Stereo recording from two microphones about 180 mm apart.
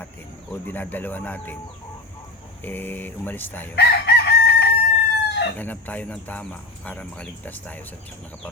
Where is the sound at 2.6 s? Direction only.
10° left (ahead or behind).